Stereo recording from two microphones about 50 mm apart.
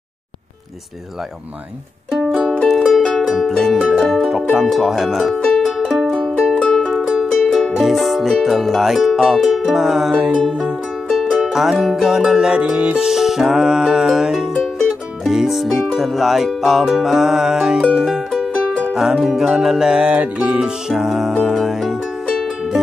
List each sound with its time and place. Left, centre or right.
2.0 s music: centre
6.9 s music: centre
11.1 s music: centre
12.7 s music: right
13.0 s music: centre
20.0 s music: right
20.9 s music: centre